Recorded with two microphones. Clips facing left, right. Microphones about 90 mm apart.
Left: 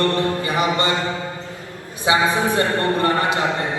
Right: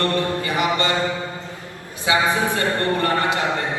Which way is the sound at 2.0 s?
20° left (ahead or behind).